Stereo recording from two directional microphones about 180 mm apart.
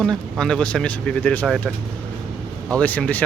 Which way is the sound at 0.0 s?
5° left (ahead or behind).